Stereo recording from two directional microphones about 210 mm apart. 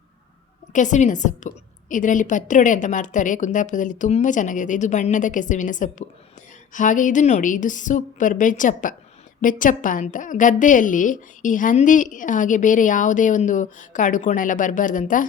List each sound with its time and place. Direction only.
0.7 s a woman's voice: 35° left (ahead or behind)